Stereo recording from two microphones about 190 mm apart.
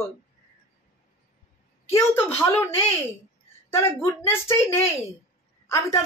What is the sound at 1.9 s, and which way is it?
Speech, 10° left (ahead or behind).